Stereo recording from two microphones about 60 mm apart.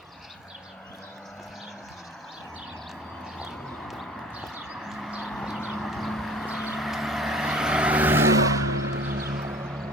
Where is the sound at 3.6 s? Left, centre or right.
Centre.